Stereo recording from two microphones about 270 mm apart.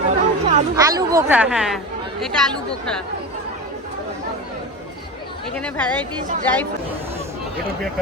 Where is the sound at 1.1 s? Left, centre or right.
Centre.